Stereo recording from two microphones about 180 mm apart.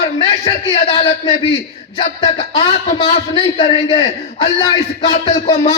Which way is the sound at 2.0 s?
35° left (ahead or behind).